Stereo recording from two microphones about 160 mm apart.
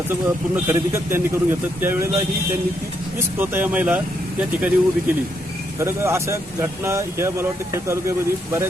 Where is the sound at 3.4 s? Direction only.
10° right (ahead or behind).